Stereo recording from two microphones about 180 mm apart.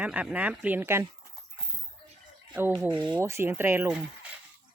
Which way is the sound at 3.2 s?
15° right (ahead or behind).